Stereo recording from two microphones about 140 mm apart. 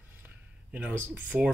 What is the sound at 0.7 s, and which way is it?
Speech, 15° right (ahead or behind).